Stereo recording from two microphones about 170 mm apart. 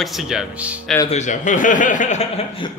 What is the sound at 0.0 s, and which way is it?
Speech, centre (ahead or behind).